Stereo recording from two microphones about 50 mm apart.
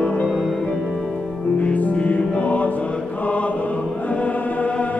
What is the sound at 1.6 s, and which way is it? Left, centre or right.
Music, left.